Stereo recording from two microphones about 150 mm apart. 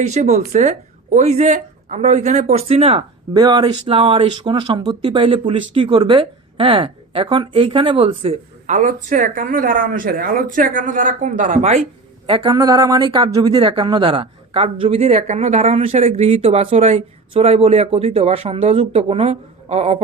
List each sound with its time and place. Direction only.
0.0 s a woman's voice: 50° right (ahead or behind)
3.3 s speech: 30° right (ahead or behind); by 11.8 s 50° right (ahead or behind)
12.2 s a woman's voice: 35° right (ahead or behind)